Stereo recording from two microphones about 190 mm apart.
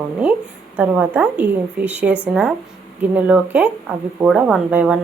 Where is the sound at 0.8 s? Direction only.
10° right (ahead or behind).